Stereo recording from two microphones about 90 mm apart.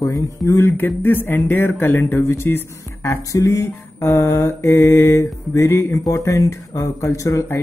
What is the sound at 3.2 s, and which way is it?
Mantra, 40° left (ahead or behind).